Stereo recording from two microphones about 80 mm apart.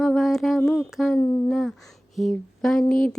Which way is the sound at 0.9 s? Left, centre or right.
Centre.